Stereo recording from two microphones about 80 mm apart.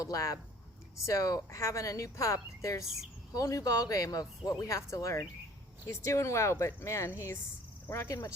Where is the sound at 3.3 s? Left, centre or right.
Left.